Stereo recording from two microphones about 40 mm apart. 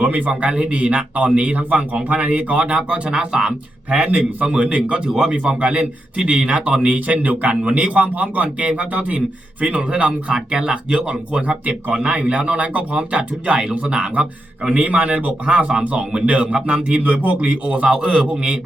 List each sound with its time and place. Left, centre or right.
0.0 s a man's voice: right
11.6 s speech: right
12.0 s speech: right
14.7 s a man's voice: right
15.8 s a man's voice: right
17.0 s a man's voice: right
17.8 s speech: right